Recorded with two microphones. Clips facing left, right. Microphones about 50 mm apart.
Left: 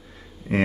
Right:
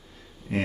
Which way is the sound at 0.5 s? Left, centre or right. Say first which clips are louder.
Left 5 dB; left.